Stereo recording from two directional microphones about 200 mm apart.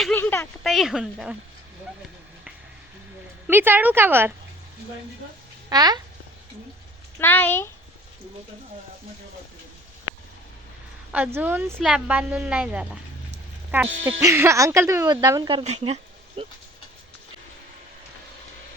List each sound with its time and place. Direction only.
0.0 s speech: 10° left (ahead or behind)
0.6 s a woman's voice: centre (ahead or behind)
3.4 s a woman's voice: 10° right (ahead or behind)
5.6 s speech: 20° right (ahead or behind)
7.2 s speech: 10° left (ahead or behind)
11.1 s a woman's voice: 10° right (ahead or behind); by 16.5 s 25° right (ahead or behind)